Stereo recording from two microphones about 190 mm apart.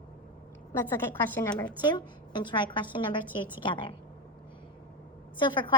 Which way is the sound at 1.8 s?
25° left (ahead or behind).